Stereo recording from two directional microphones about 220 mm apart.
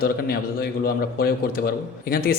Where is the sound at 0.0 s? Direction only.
45° left (ahead or behind).